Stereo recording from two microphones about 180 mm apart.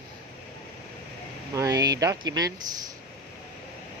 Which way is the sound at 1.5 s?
20° right (ahead or behind).